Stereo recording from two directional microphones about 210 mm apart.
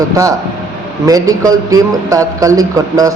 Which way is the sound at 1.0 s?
15° right (ahead or behind).